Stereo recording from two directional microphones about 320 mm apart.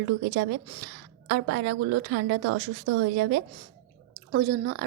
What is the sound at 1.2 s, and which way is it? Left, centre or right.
Speech, right.